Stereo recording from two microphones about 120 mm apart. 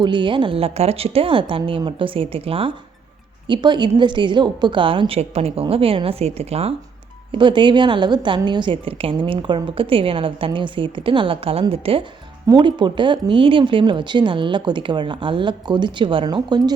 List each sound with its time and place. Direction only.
0.0 s a woman's voice: 40° right (ahead or behind)
3.4 s a woman's voice: 40° right (ahead or behind); by 6.7 s 60° right (ahead or behind)
7.3 s a woman's voice: 40° right (ahead or behind)
12.5 s a woman's voice: 40° right (ahead or behind)